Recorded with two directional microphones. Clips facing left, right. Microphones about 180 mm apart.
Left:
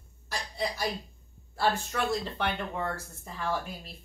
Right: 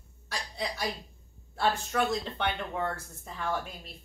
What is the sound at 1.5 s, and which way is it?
Speech, centre (ahead or behind).